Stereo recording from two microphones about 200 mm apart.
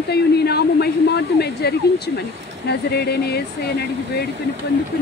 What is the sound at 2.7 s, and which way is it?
Speech, 55° left (ahead or behind).